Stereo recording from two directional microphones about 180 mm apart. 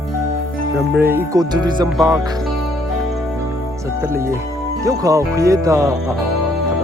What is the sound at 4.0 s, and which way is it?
Speech, 15° right (ahead or behind).